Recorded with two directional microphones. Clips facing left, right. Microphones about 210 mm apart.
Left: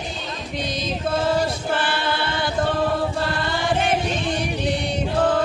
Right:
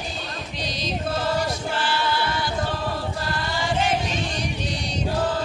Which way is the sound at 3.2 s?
55° left (ahead or behind).